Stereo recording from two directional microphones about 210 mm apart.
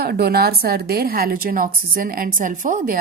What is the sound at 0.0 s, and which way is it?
A woman's voice, 50° right (ahead or behind).